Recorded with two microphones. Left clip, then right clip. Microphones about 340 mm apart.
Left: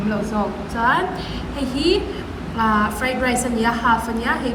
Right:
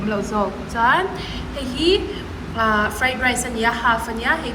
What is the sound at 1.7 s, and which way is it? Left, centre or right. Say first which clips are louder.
Speech: right 1 dB; right.